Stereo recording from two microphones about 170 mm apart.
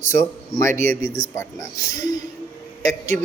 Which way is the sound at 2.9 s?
45° right (ahead or behind).